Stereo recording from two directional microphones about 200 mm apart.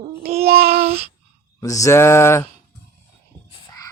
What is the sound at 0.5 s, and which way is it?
Child singing, 30° right (ahead or behind).